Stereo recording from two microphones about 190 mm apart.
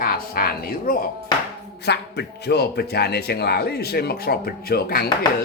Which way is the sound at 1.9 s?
60° left (ahead or behind).